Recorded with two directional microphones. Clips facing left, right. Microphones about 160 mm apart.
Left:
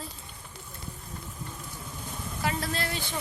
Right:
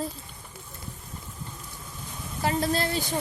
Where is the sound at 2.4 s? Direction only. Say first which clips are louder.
Right 6 dB; 30° right (ahead or behind).